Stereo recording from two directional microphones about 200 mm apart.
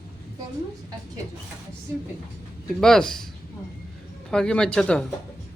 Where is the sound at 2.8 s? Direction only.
5° left (ahead or behind).